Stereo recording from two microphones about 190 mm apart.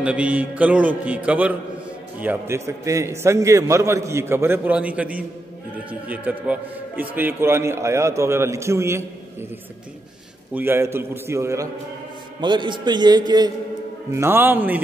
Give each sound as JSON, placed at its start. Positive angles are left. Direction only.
{"t": 0.0, "sound": "a man's voice", "side_deg": -5}
{"t": 10.5, "sound": "a man's voice", "side_deg": -10}
{"t": 14.1, "sound": "a man's voice", "side_deg": -10}